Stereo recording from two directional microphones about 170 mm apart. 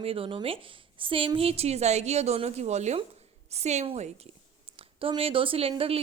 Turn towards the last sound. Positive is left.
turn(degrees=-35)  # may be behind; listen again after turning